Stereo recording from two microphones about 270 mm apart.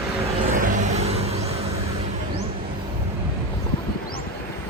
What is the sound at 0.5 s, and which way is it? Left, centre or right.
Vehicle, right.